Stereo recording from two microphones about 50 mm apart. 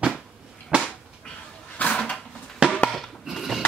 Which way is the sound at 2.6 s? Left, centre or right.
Right.